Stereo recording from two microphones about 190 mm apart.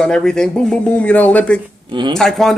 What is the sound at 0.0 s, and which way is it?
Speech, 5° left (ahead or behind).